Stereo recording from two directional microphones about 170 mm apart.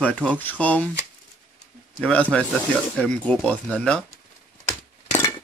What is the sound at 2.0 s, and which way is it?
Speech, 5° left (ahead or behind).